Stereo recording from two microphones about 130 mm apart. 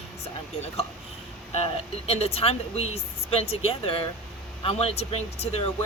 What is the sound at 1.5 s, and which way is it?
Speech, 50° left (ahead or behind).